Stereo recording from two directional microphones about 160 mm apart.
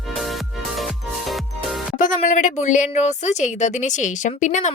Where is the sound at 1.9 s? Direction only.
50° left (ahead or behind).